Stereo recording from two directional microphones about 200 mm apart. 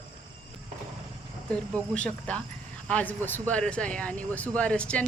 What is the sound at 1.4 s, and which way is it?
Speech, 5° left (ahead or behind).